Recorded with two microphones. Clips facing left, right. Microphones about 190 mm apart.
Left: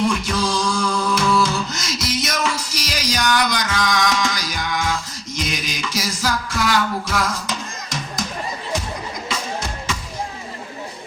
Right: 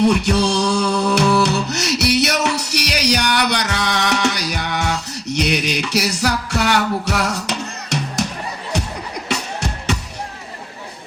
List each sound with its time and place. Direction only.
0.0 s music: 70° right (ahead or behind)
9.3 s music: 70° right (ahead or behind)